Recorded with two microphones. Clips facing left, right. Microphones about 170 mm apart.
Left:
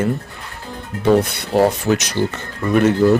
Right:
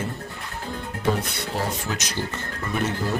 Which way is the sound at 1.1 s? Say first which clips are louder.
Left 12 dB; 70° left (ahead or behind).